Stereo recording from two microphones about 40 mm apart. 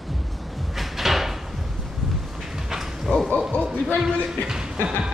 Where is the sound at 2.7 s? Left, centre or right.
Centre.